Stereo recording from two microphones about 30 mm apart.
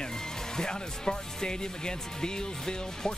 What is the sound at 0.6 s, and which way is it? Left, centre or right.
Speech, left.